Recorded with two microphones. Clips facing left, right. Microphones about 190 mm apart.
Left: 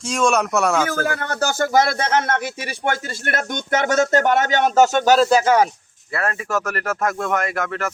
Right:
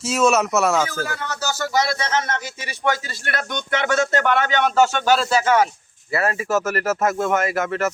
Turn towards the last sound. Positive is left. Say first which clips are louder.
# right 2 dB
turn(degrees=0)  # may be behind; listen again after turning